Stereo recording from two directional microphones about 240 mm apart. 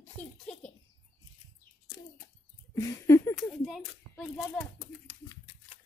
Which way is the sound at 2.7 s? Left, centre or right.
Centre.